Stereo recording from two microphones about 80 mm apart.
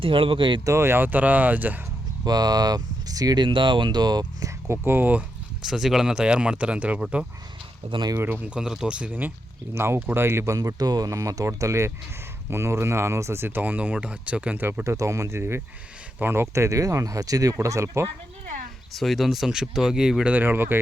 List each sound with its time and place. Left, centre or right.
0.0 s speech: right
0.6 s speech: right
2.2 s speech: right
3.4 s speech: right
4.7 s speech: right
5.6 s speech: centre
7.9 s speech: right
8.2 s speech: right
8.4 s speech: centre
9.7 s speech: right
10.6 s speech: right
14.8 s speech: right
18.9 s speech: centre
20.3 s speech: right